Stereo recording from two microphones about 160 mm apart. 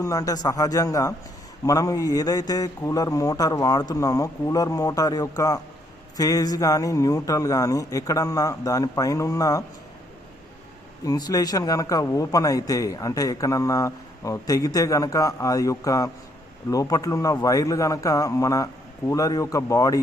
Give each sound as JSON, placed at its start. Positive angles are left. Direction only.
{"t": 0.0, "sound": "a man's voice", "side_deg": 20}
{"t": 11.0, "sound": "a man's voice", "side_deg": 25}